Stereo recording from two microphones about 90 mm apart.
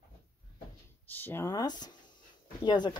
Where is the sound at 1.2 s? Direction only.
25° left (ahead or behind).